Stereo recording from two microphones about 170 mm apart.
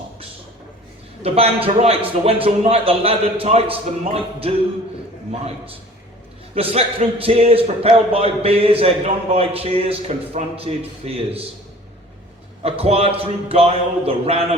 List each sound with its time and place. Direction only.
1.2 s speech: 35° right (ahead or behind)
6.5 s a man's voice: 35° right (ahead or behind)
12.6 s speech: 35° right (ahead or behind)